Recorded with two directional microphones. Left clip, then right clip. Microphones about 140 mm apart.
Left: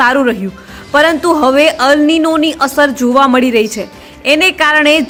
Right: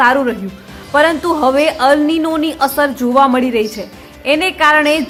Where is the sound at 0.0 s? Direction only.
25° left (ahead or behind).